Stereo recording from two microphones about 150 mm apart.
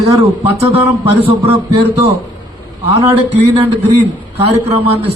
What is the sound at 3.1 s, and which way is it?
A man's voice, 45° right (ahead or behind).